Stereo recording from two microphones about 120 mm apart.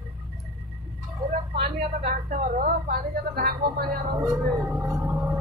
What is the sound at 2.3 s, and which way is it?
Speech, 90° right.